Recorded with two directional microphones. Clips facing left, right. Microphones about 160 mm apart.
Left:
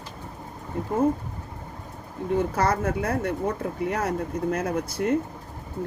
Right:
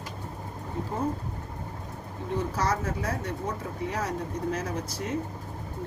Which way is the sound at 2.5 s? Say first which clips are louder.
Left 5 dB; 55° left (ahead or behind).